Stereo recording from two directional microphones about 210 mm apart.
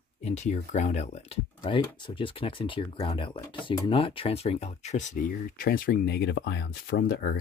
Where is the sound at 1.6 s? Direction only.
20° left (ahead or behind).